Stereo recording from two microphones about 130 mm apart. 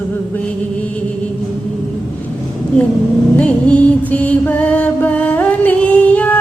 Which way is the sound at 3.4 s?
10° left (ahead or behind).